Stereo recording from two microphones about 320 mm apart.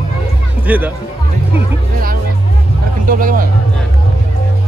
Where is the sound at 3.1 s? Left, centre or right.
Right.